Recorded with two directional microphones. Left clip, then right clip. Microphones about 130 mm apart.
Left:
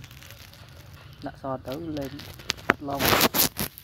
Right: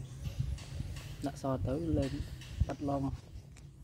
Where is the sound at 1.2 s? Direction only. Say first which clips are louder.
Left 4 dB; 70° right (ahead or behind).